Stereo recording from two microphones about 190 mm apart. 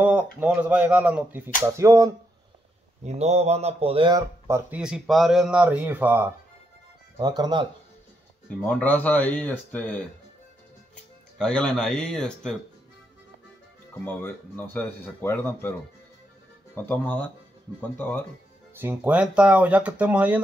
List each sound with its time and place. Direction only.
0.0 s speech: 10° right (ahead or behind)
3.0 s speech: 35° right (ahead or behind)
4.5 s speech: 10° right (ahead or behind)
7.2 s speech: 20° right (ahead or behind)
8.6 s speech: 10° left (ahead or behind)
11.3 s speech: 5° left (ahead or behind)
14.0 s speech: 10° left (ahead or behind)
16.7 s speech: 10° left (ahead or behind)
18.8 s speech: 10° right (ahead or behind)